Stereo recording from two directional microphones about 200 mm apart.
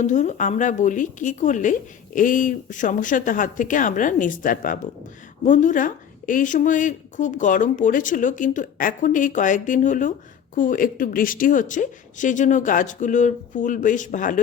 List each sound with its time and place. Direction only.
0.0 s a woman's voice: 35° left (ahead or behind)